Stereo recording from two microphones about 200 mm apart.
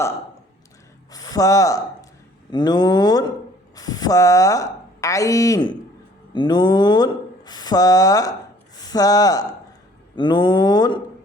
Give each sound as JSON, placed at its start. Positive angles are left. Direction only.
{"t": 1.1, "sound": "a woman's voice", "side_deg": 20}